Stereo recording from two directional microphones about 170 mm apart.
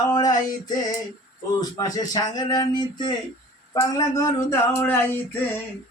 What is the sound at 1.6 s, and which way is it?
Speech, 20° left (ahead or behind).